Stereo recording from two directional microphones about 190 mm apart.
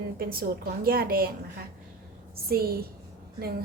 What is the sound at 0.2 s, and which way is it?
Speech, 50° right (ahead or behind).